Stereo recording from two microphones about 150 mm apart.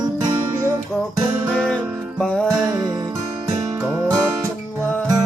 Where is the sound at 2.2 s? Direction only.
5° left (ahead or behind).